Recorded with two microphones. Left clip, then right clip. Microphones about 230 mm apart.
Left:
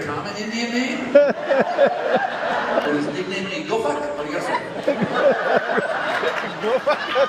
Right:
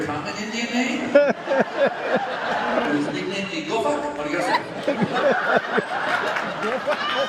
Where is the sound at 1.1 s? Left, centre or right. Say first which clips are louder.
Left 3 dB; centre.